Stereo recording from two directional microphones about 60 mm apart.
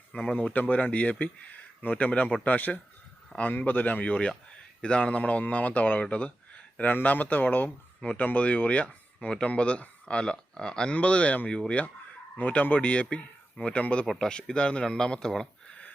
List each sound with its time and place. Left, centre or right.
0.3 s speech: left; by 15.4 s centre